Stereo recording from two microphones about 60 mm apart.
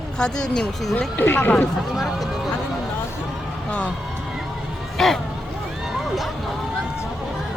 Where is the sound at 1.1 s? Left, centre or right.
Left.